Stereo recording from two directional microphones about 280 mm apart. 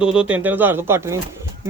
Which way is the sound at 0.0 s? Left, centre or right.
Centre.